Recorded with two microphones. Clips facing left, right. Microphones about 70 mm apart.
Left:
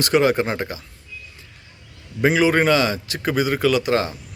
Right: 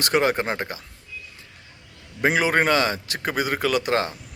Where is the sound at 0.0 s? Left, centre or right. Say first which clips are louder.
Left 4 dB; right.